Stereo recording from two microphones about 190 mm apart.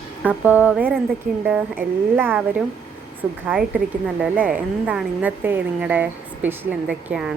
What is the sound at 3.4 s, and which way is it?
A woman's voice, 5° right (ahead or behind).